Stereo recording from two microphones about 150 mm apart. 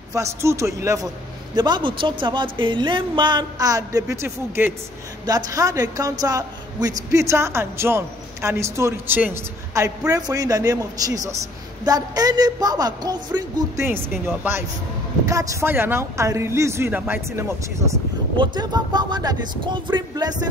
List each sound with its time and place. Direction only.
0.1 s speech: 20° right (ahead or behind)
1.5 s speech: 30° right (ahead or behind)
13.8 s speech: 15° right (ahead or behind)